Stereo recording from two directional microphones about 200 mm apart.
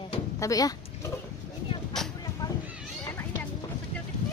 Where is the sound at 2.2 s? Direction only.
20° left (ahead or behind).